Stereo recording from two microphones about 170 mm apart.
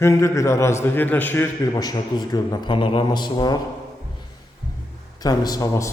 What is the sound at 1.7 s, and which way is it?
A man's voice, 25° left (ahead or behind).